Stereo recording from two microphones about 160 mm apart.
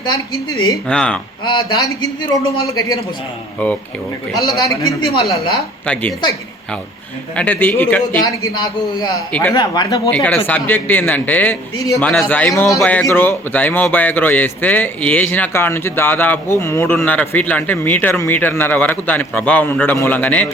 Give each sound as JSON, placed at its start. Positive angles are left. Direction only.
{"t": 0.9, "sound": "speech", "side_deg": 5}
{"t": 1.5, "sound": "a man's voice", "side_deg": 25}
{"t": 4.4, "sound": "a man's voice", "side_deg": 25}
{"t": 5.8, "sound": "speech", "side_deg": 10}
{"t": 7.3, "sound": "speech", "side_deg": 10}
{"t": 8.2, "sound": "a man's voice", "side_deg": 20}
{"t": 10.1, "sound": "a man's voice", "side_deg": 10}